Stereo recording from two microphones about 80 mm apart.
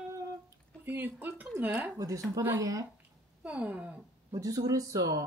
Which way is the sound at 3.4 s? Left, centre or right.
Centre.